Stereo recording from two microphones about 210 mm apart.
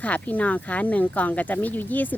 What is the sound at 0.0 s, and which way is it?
Speech, 5° left (ahead or behind).